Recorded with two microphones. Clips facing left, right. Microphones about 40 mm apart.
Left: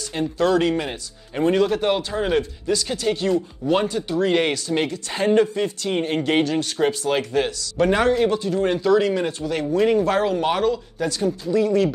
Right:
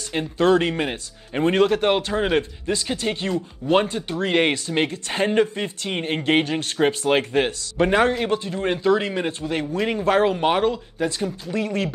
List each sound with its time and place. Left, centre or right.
0.1 s speech: right
11.5 s speech: right